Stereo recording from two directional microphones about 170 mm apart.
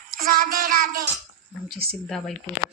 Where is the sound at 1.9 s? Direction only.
5° left (ahead or behind).